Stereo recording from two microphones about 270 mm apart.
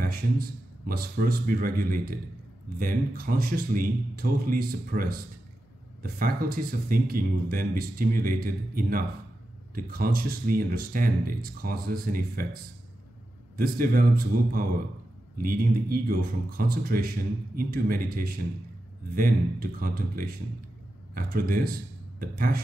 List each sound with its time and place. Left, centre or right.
0.0 s speech: right
13.6 s speech: right